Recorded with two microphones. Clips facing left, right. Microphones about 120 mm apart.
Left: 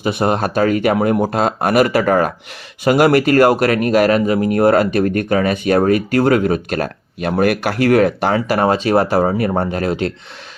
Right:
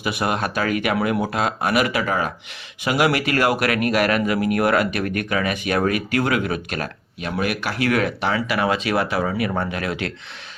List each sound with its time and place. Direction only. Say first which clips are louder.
0.0 s speech: left 6 dB; 35° left (ahead or behind)